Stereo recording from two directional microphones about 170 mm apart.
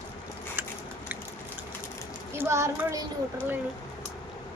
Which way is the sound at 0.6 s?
10° right (ahead or behind).